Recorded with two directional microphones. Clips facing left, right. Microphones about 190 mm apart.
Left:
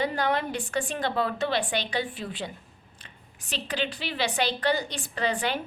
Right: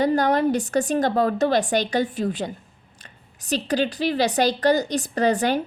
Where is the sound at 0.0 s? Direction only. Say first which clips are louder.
Right 8 dB; 40° right (ahead or behind).